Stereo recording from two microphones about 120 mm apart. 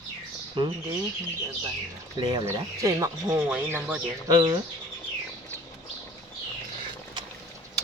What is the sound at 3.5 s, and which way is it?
Speech, 15° right (ahead or behind).